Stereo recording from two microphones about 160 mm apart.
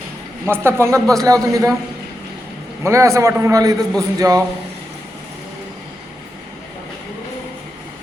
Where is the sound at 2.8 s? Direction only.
20° right (ahead or behind).